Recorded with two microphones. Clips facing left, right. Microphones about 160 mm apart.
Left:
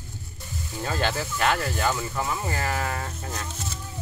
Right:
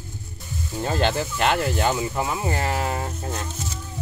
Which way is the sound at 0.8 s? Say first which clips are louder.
Right 4 dB; 20° right (ahead or behind).